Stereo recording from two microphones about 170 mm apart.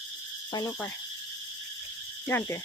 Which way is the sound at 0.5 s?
25° left (ahead or behind).